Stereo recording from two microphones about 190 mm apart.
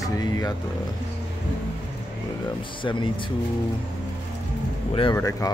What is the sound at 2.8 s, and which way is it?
Speech, 25° left (ahead or behind).